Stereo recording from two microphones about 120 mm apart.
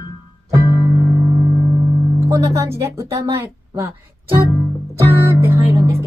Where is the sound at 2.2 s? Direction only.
25° right (ahead or behind).